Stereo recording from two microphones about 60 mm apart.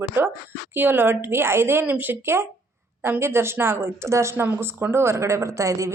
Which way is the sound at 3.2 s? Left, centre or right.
Right.